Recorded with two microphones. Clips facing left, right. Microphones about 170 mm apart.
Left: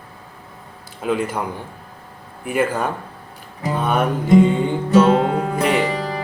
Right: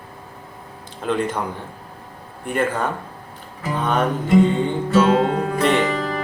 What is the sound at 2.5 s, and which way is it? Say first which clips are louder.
Music: left 1 dB; 10° left (ahead or behind).